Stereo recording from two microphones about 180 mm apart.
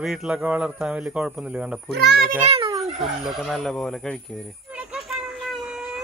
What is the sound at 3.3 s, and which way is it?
Speech, centre (ahead or behind).